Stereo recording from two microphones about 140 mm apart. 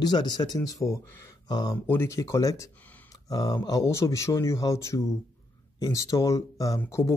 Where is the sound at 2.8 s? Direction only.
10° left (ahead or behind).